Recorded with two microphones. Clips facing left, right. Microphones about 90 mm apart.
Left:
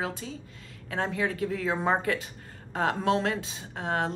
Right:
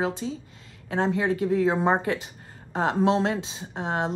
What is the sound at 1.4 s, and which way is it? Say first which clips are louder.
Speech: right 6 dB; 30° right (ahead or behind).